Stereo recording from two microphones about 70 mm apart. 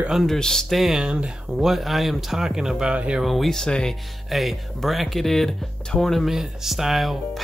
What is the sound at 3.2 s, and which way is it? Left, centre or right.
Speech, centre.